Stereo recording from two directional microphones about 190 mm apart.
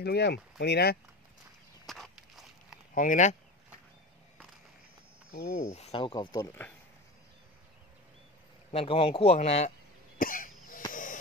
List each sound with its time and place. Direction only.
0.0 s speech: 60° left (ahead or behind)
1.9 s walk: centre (ahead or behind)
2.9 s speech: 45° left (ahead or behind)
5.5 s speech: 40° left (ahead or behind); by 6.5 s 20° left (ahead or behind)
8.7 s speech: 30° left (ahead or behind)
10.1 s cough: 45° left (ahead or behind)
10.9 s a sound: 45° left (ahead or behind)